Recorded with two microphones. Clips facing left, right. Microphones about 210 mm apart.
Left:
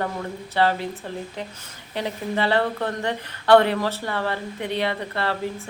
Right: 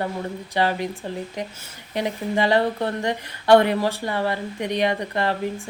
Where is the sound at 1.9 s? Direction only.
15° right (ahead or behind).